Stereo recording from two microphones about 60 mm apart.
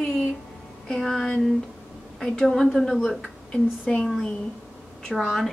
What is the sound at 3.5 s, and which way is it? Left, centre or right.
Speech, centre.